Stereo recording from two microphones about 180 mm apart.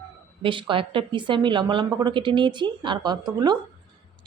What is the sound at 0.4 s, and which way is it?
A woman's voice, 30° right (ahead or behind).